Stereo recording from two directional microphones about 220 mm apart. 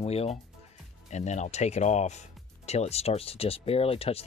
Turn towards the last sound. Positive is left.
turn(degrees=25)  # may be behind; listen again after turning